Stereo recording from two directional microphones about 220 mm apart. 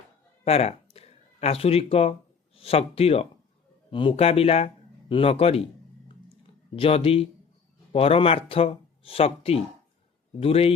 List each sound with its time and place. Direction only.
0.4 s speech: 30° left (ahead or behind)
6.7 s speech: 25° left (ahead or behind)